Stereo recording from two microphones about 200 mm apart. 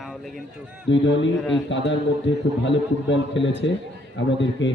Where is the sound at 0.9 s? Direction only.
65° left (ahead or behind).